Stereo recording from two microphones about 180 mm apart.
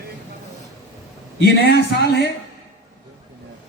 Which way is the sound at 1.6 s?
70° left (ahead or behind).